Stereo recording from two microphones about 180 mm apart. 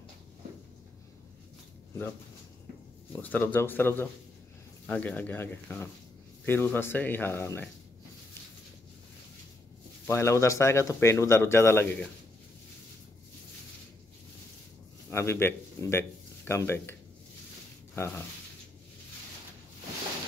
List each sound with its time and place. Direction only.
3.1 s speech: 10° left (ahead or behind)
10.0 s speech: 15° left (ahead or behind)
15.0 s speech: 15° left (ahead or behind)
17.9 s speech: 15° left (ahead or behind)